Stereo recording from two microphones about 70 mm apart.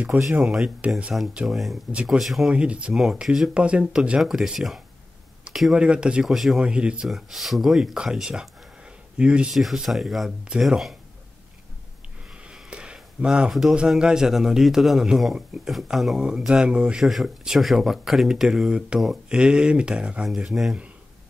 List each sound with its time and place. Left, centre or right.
0.4 s a man's voice: centre
1.5 s speech: centre
2.5 s a man's voice: centre
4.2 s a man's voice: centre
6.2 s speech: centre
6.6 s a man's voice: centre
7.1 s a man's voice: centre
9.5 s speech: centre
12.4 s a sound: centre
13.5 s a man's voice: centre
17.0 s a man's voice: centre
20.2 s speech: centre